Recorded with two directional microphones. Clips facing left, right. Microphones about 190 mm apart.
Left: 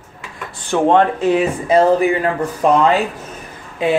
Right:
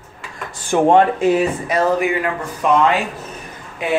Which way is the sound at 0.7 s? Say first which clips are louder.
Right 1 dB; 10° right (ahead or behind).